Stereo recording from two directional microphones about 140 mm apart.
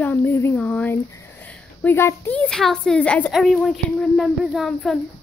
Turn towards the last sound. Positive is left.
turn(degrees=0)  # may be behind; listen again after turning